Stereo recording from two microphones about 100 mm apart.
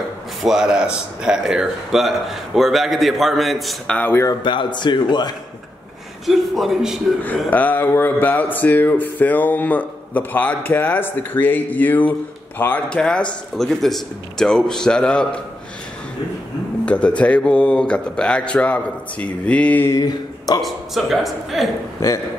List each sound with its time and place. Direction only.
0.4 s speech: 5° right (ahead or behind)
3.9 s speech: 20° left (ahead or behind)
4.3 s speech: 50° left (ahead or behind)
6.2 s speech: centre (ahead or behind)
7.5 s speech: 20° left (ahead or behind)
16.8 s speech: 10° left (ahead or behind)
19.9 s a sound: 40° left (ahead or behind)
20.6 s speech: centre (ahead or behind)